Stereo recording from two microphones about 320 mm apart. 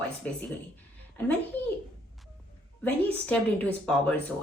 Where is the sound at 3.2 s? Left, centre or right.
Centre.